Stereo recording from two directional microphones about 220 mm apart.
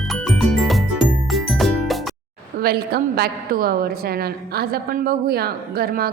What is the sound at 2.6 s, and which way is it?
A woman's voice, 45° right (ahead or behind).